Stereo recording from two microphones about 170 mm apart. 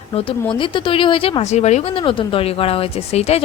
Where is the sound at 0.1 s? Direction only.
35° left (ahead or behind).